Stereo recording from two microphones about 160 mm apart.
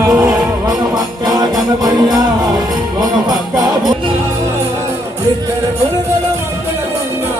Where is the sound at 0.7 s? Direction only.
25° right (ahead or behind).